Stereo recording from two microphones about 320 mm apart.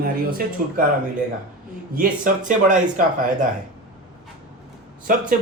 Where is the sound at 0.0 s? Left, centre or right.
Right.